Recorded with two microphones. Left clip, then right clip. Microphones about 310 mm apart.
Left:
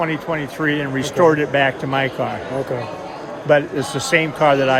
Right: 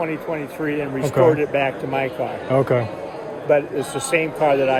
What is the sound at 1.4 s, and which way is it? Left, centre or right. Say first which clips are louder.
Speech: left 3 dB; left.